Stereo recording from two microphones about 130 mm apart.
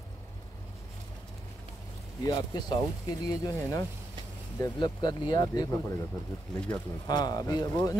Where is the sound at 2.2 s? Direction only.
30° left (ahead or behind).